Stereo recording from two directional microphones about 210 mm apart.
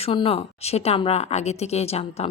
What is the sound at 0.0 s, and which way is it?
Speech, 25° left (ahead or behind).